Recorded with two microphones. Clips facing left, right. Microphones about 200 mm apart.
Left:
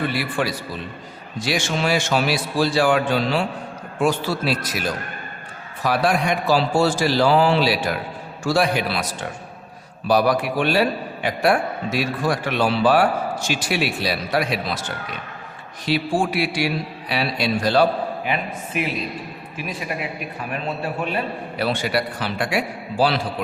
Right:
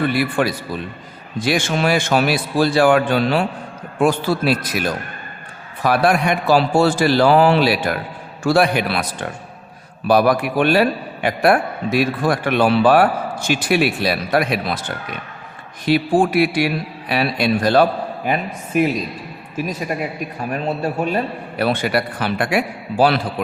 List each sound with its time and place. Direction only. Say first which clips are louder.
0.1 s a man's voice: right 5 dB; 55° right (ahead or behind)
10.1 s a man's voice: right 3 dB; 55° right (ahead or behind)
18.3 s speech: right 4 dB; 45° right (ahead or behind)
20.5 s a man's voice: right 5 dB; 40° right (ahead or behind)